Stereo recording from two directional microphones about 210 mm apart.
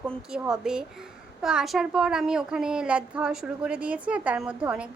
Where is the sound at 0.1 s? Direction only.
5° right (ahead or behind).